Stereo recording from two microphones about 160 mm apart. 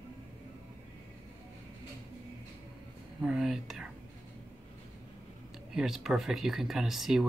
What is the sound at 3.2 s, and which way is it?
Whispering, 5° right (ahead or behind).